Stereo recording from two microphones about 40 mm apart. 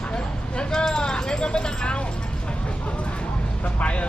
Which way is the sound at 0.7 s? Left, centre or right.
Centre.